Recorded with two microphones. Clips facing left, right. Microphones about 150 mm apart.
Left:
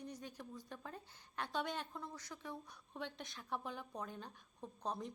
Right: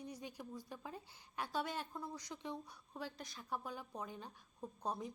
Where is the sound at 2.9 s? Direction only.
5° right (ahead or behind).